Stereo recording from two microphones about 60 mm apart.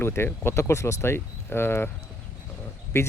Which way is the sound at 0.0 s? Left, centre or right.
Left.